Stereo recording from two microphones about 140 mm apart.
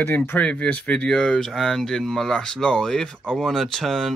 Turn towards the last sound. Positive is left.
turn(degrees=5)  # may be behind; listen again after turning